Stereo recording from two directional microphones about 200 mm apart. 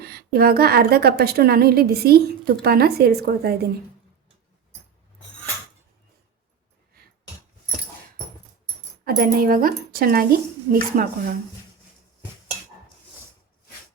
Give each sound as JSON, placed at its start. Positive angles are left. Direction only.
{"t": 0.0, "sound": "a woman's voice", "side_deg": -50}
{"t": 9.0, "sound": "a woman's voice", "side_deg": -45}